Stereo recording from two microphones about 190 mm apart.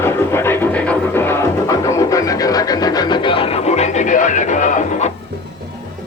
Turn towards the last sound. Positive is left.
turn(degrees=40)  # may be behind; listen again after turning